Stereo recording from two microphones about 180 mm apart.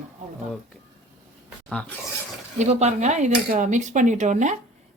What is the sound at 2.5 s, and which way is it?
Speech, 40° right (ahead or behind).